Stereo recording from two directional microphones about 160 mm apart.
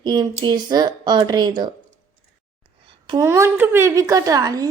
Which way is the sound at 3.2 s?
15° right (ahead or behind).